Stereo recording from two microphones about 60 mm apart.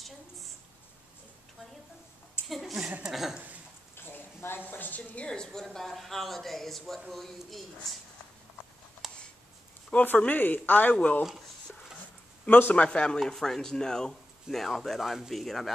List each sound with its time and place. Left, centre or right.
2.4 s a sound: centre
3.0 s speech: centre
3.9 s a sound: left
5.2 s speech: centre
9.0 s a sound: centre
10.0 s a woman's voice: left
12.4 s a man's voice: left
12.7 s speech: centre
13.2 s speech: centre